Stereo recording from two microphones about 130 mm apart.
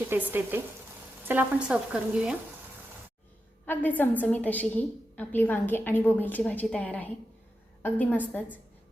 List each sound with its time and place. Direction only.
0.1 s frying: 15° right (ahead or behind)
3.7 s a woman's voice: 15° left (ahead or behind)